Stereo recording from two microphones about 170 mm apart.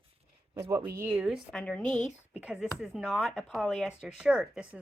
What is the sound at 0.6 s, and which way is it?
Speech, 15° right (ahead or behind).